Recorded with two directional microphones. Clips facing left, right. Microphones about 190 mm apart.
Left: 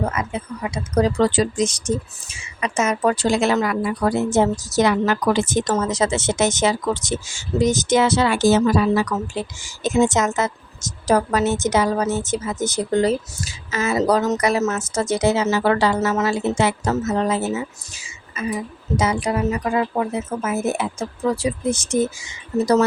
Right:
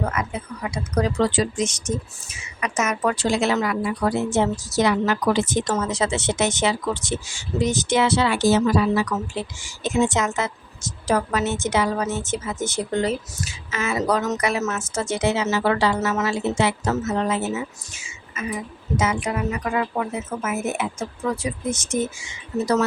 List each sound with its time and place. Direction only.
0.0 s speech: 25° left (ahead or behind)
1.2 s speech: 40° left (ahead or behind)
17.9 s a sound: 35° left (ahead or behind)
18.9 s speech: 35° left (ahead or behind)